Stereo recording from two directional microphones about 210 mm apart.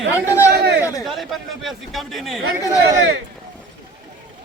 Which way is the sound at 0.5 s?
50° right (ahead or behind).